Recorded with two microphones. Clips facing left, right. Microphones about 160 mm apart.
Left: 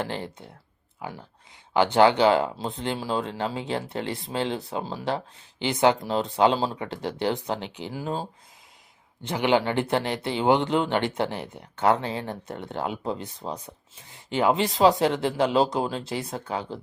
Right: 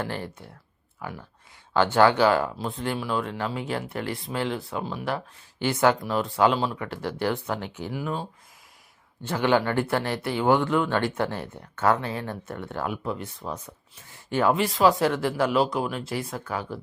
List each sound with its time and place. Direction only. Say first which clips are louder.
0.0 s speech: left 1 dB; 20° left (ahead or behind)
9.2 s speech: even; 15° left (ahead or behind)